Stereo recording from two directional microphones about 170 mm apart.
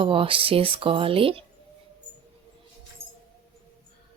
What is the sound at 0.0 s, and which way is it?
Speech, 30° right (ahead or behind).